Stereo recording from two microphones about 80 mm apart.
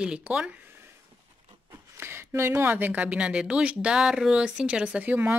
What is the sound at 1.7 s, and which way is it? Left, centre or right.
Speech, right.